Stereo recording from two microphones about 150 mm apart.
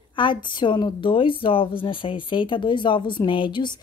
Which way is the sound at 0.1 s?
30° left (ahead or behind).